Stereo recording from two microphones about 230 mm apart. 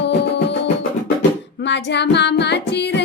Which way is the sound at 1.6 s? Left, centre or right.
Left.